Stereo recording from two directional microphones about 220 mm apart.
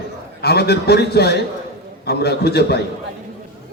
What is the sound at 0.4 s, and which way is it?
Speech, 45° left (ahead or behind).